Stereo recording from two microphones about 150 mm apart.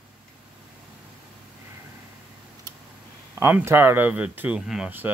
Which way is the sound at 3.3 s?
15° right (ahead or behind).